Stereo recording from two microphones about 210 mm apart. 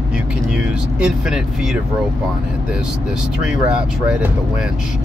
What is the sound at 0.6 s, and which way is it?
Speech, 5° right (ahead or behind).